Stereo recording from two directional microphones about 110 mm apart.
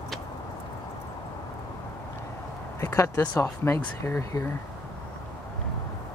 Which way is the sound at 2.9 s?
15° left (ahead or behind).